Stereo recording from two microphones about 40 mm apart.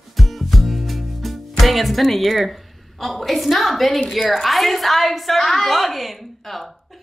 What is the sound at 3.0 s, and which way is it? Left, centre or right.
A woman's voice, centre.